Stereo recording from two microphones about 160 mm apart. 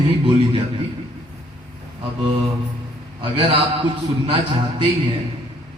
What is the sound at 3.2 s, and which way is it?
A man's voice, 35° right (ahead or behind).